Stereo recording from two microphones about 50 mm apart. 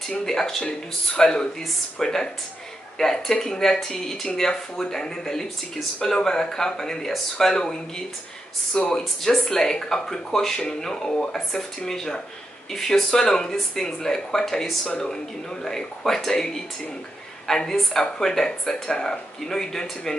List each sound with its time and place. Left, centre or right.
0.2 s speech: centre
8.7 s speech: centre